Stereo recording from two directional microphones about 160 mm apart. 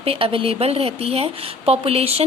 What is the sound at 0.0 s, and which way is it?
A woman's voice, 35° right (ahead or behind).